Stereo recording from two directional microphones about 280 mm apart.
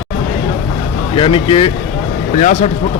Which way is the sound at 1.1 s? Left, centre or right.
Centre.